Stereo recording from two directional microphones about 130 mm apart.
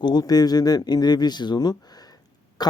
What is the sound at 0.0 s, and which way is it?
Speech, 30° left (ahead or behind).